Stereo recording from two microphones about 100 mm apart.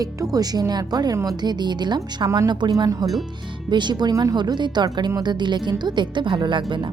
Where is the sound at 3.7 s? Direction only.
50° right (ahead or behind).